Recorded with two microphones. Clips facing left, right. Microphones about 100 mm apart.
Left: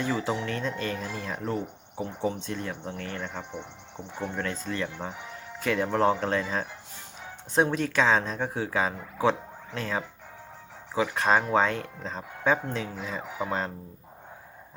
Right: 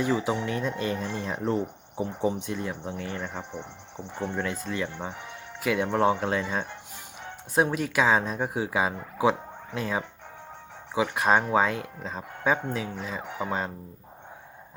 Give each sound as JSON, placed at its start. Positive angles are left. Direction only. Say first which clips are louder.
{"t": 0.0, "sound": "speech", "louder": "right 2 dB", "side_deg": -10}